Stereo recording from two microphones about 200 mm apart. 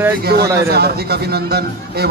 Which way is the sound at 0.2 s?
55° right (ahead or behind).